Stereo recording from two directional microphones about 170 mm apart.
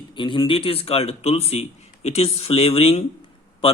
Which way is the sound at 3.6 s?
35° left (ahead or behind).